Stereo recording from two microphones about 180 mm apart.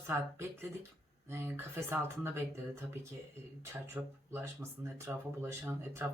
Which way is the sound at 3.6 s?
10° right (ahead or behind).